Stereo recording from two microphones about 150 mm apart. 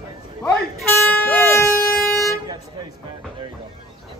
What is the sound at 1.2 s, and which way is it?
Speech, 15° left (ahead or behind).